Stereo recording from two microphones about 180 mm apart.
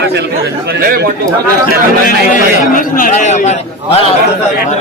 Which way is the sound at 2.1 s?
50° left (ahead or behind).